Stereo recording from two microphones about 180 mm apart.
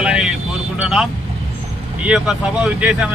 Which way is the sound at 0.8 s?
5° right (ahead or behind).